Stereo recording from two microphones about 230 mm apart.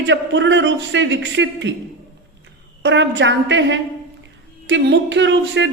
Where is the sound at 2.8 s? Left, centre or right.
Right.